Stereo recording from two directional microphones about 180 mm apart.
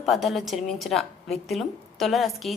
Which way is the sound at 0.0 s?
Centre (ahead or behind).